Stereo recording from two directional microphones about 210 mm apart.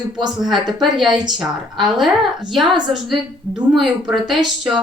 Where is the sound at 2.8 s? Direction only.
20° right (ahead or behind).